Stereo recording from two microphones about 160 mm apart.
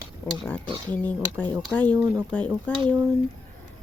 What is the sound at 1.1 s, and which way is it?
A woman's voice, 10° left (ahead or behind).